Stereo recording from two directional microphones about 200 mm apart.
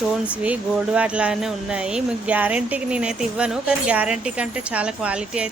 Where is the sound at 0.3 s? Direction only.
5° right (ahead or behind).